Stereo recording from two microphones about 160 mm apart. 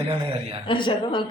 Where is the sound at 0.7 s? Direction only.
30° left (ahead or behind).